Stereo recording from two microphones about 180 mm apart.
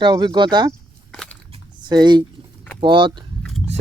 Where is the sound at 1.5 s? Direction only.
25° right (ahead or behind).